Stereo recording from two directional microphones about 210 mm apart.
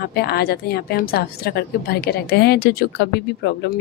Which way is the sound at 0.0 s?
50° left (ahead or behind).